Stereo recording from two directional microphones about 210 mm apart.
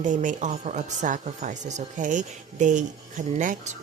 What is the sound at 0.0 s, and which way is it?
Speech, 35° right (ahead or behind).